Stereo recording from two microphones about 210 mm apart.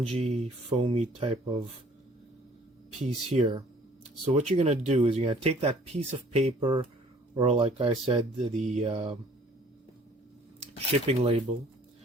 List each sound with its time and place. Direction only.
0.0 s speech: 30° right (ahead or behind)
3.0 s speech: 30° right (ahead or behind)
11.0 s speech: 30° right (ahead or behind)